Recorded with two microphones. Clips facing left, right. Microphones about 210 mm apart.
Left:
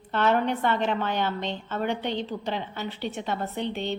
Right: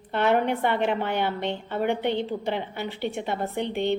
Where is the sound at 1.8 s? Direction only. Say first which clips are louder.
Right 4 dB; 60° right (ahead or behind).